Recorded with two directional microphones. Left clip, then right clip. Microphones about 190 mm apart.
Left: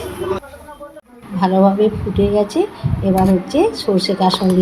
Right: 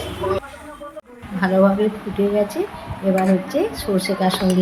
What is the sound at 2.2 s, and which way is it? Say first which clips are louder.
A woman's voice: left 3 dB; 15° left (ahead or behind).